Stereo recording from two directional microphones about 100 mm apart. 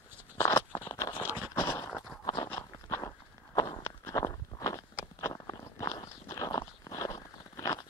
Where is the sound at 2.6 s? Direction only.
35° left (ahead or behind).